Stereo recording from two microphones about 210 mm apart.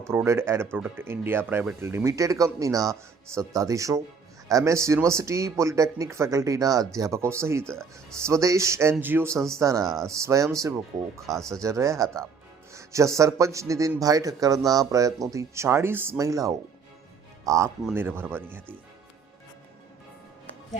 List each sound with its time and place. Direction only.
0.1 s a man's voice: 10° right (ahead or behind)